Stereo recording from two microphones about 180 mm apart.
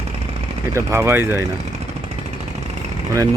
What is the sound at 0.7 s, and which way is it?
Speech, 15° right (ahead or behind).